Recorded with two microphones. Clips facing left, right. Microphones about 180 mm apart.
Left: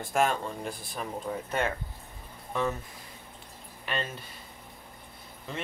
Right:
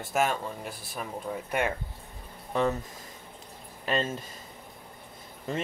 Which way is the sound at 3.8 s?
35° right (ahead or behind).